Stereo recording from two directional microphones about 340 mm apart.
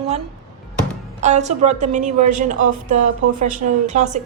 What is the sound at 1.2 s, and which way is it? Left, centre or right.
A woman's voice, right.